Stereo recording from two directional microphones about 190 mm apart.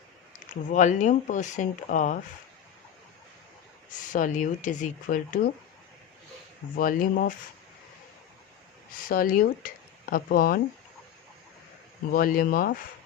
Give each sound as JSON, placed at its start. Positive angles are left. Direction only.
{"t": 0.7, "sound": "speech", "side_deg": 40}
{"t": 3.9, "sound": "speech", "side_deg": 45}
{"t": 6.7, "sound": "speech", "side_deg": 50}
{"t": 8.9, "sound": "speech", "side_deg": 45}
{"t": 12.1, "sound": "speech", "side_deg": 50}